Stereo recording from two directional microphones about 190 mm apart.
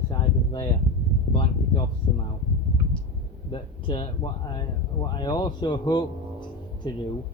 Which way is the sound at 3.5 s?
25° left (ahead or behind).